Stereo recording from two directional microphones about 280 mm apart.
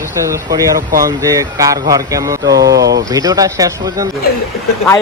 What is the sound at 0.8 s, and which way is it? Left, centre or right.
Speech, right.